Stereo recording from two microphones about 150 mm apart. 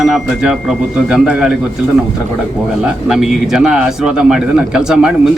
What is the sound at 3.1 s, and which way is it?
A man's voice, 5° right (ahead or behind).